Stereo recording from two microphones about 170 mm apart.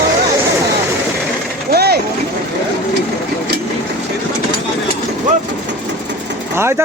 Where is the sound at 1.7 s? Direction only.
70° right (ahead or behind).